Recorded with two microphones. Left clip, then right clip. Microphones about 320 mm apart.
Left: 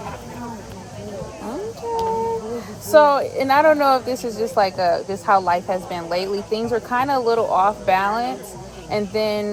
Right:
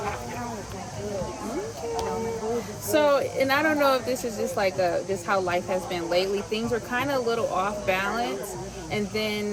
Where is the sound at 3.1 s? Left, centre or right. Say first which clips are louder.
Left 5 dB; centre.